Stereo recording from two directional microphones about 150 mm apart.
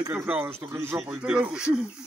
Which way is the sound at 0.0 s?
15° right (ahead or behind).